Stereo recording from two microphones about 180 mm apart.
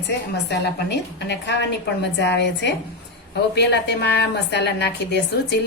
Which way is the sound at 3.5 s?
70° left (ahead or behind).